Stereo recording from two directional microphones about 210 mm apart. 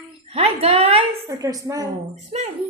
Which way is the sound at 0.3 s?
30° right (ahead or behind).